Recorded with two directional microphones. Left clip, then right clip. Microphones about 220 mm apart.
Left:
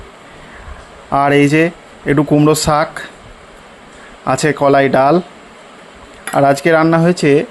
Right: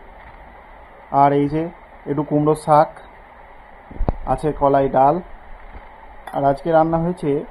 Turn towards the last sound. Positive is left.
turn(degrees=45)  # may be behind; listen again after turning